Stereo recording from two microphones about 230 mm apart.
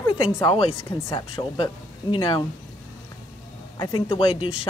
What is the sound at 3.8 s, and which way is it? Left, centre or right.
Speech, left.